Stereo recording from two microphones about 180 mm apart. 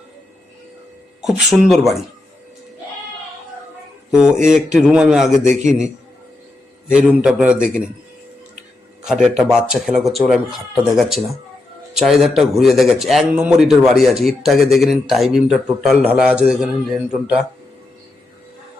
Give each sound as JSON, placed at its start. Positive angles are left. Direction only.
{"t": 1.2, "sound": "a man's voice", "side_deg": 0}
{"t": 4.1, "sound": "a man's voice", "side_deg": -5}
{"t": 5.5, "sound": "a man's voice", "side_deg": -40}
{"t": 6.8, "sound": "a man's voice", "side_deg": -5}
{"t": 9.2, "sound": "a man's voice", "side_deg": -5}